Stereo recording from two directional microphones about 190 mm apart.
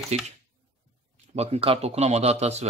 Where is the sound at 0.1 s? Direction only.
35° right (ahead or behind).